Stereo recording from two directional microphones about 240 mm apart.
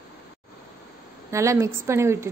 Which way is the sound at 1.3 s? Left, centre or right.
Centre.